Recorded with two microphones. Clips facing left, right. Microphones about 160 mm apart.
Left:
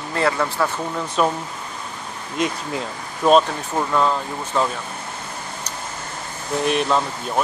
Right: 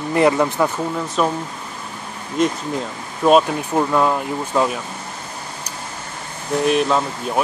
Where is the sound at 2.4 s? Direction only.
Centre (ahead or behind).